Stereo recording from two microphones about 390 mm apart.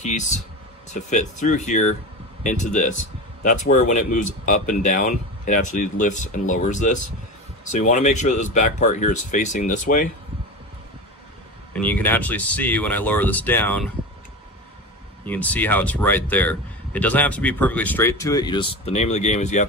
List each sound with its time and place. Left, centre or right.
0.0 s speech: centre
11.7 s speech: centre
15.2 s speech: centre